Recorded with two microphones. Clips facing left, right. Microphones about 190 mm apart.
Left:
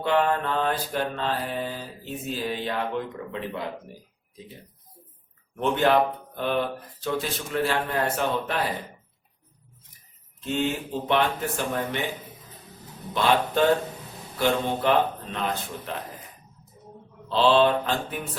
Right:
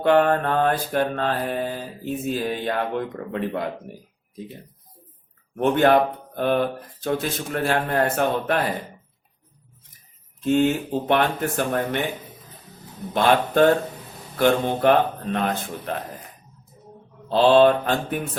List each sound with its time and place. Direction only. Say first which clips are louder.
0.0 s mantra: right 5 dB; 55° right (ahead or behind)
5.5 s mantra: right 4 dB; 55° right (ahead or behind)
10.4 s mantra: right 7 dB; 50° right (ahead or behind)
13.1 s mantra: right 4 dB; 50° right (ahead or behind)
17.2 s mantra: right 5 dB; 50° right (ahead or behind)